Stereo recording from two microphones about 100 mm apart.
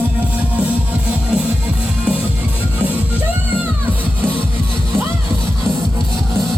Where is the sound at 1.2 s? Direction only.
10° right (ahead or behind).